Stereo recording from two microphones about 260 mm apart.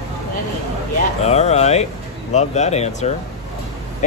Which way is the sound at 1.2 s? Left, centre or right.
Left.